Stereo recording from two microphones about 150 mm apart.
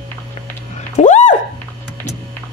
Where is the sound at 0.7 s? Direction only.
50° left (ahead or behind).